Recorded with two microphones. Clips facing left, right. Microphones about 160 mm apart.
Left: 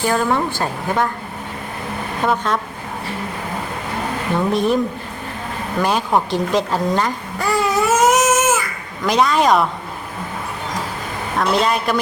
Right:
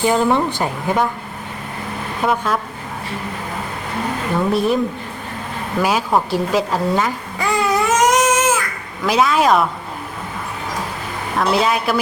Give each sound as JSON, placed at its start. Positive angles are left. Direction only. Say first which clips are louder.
{"t": 0.0, "sound": "a woman's voice", "louder": "right 2 dB", "side_deg": -20}
{"t": 2.2, "sound": "speech", "louder": "even", "side_deg": -5}
{"t": 4.4, "sound": "speech", "louder": "even", "side_deg": 0}
{"t": 5.8, "sound": "babbling", "louder": "even", "side_deg": -5}
{"t": 9.0, "sound": "speech", "louder": "even", "side_deg": -5}
{"t": 11.3, "sound": "speech", "louder": "right 1 dB", "side_deg": -5}